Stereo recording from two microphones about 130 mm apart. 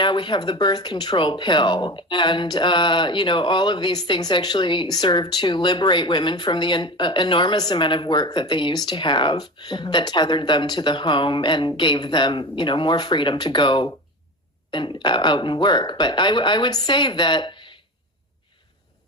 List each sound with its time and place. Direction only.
0.0 s speech: 35° left (ahead or behind)